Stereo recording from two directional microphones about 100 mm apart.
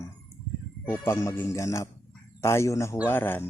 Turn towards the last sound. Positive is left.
turn(degrees=20)  # may be behind; listen again after turning